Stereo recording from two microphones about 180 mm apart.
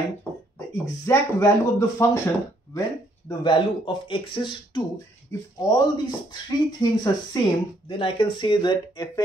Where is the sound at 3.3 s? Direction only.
25° left (ahead or behind).